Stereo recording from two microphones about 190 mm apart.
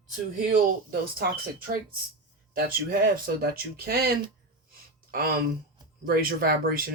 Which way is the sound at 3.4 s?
50° right (ahead or behind).